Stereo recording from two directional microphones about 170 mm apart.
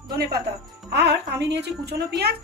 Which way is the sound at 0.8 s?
75° right (ahead or behind).